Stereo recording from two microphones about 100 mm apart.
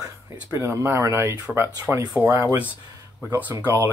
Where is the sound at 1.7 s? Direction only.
40° right (ahead or behind).